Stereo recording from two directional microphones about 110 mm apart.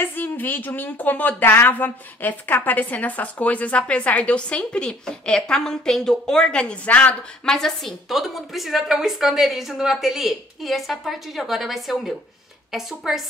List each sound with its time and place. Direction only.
0.0 s a woman's voice: 20° left (ahead or behind); by 13.2 s 5° right (ahead or behind)